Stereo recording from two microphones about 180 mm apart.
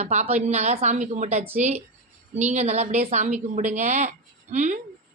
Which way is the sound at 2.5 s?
40° right (ahead or behind).